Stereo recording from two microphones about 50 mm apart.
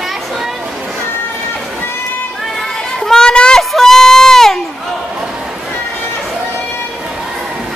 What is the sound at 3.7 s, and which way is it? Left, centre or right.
Goat, centre.